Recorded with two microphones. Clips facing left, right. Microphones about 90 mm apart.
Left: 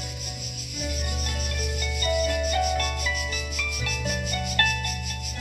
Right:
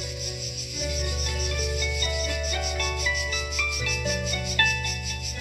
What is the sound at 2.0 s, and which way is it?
Music, 40° left (ahead or behind).